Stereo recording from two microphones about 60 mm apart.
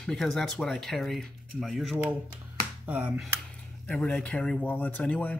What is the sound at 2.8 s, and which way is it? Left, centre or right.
Speech, right.